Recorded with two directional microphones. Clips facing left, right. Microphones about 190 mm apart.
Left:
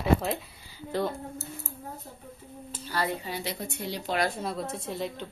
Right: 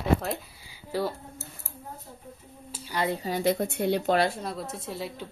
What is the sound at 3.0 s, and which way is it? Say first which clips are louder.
Speech: right 7 dB; 35° right (ahead or behind).